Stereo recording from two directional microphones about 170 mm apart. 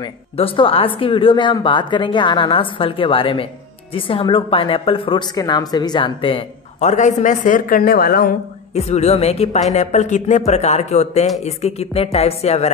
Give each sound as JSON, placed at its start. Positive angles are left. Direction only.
{"t": 0.0, "sound": "speech", "side_deg": 30}
{"t": 6.8, "sound": "speech", "side_deg": 45}
{"t": 8.7, "sound": "speech", "side_deg": 40}